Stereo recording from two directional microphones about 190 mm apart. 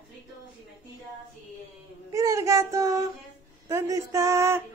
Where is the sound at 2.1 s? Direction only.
15° right (ahead or behind).